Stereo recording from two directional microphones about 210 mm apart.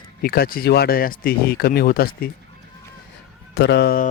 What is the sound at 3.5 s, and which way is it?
Speech, 50° left (ahead or behind).